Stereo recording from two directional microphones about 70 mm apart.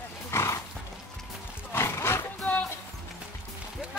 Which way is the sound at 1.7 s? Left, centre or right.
Left.